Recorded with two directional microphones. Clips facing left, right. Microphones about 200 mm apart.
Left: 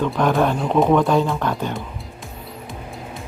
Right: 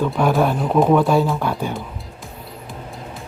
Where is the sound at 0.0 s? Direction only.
10° right (ahead or behind).